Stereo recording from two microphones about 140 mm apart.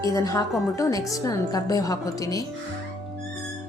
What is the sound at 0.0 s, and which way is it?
Speech, 25° left (ahead or behind).